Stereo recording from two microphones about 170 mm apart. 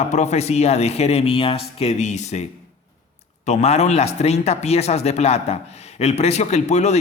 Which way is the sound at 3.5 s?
40° left (ahead or behind).